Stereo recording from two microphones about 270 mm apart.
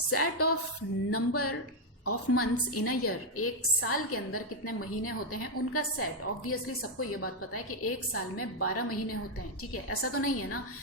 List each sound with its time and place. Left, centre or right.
0.1 s a woman's voice: left